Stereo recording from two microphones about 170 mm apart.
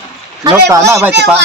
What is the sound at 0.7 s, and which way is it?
Speech, 15° right (ahead or behind).